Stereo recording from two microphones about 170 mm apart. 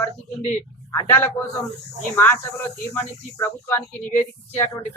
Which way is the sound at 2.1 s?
15° left (ahead or behind).